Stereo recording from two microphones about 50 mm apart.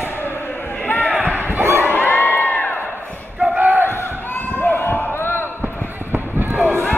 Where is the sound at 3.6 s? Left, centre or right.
Right.